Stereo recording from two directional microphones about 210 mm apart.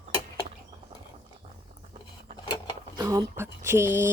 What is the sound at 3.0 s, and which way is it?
Speech, 20° right (ahead or behind).